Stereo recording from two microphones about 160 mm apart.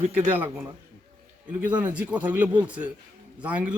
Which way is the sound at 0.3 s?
15° right (ahead or behind).